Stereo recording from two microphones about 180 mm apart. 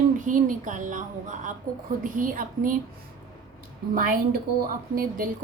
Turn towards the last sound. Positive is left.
turn(degrees=-50)  # may be behind; listen again after turning